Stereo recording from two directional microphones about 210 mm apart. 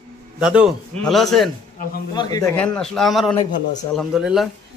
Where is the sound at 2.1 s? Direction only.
20° left (ahead or behind).